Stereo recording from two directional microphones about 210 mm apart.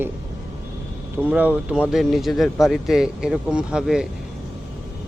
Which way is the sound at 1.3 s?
5° right (ahead or behind).